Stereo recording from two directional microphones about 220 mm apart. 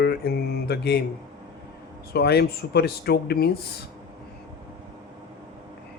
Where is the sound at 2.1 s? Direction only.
50° left (ahead or behind).